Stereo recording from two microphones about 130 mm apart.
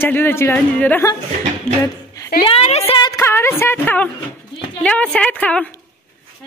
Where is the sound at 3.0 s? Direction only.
25° left (ahead or behind).